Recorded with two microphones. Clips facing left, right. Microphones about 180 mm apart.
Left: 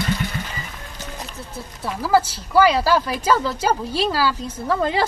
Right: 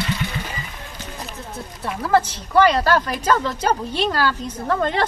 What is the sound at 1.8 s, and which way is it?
A woman's voice, 5° left (ahead or behind).